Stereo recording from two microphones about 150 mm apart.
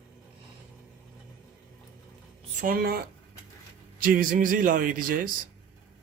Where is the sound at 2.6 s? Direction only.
80° right.